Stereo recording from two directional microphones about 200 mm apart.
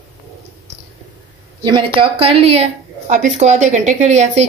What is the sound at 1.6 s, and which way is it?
A woman's voice, 25° right (ahead or behind).